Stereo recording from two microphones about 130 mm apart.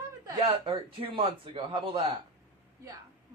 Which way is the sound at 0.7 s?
45° right (ahead or behind).